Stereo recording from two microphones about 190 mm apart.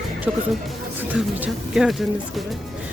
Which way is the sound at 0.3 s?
5° right (ahead or behind).